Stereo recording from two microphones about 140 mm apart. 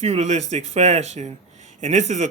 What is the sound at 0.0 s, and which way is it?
Speech, 55° right (ahead or behind).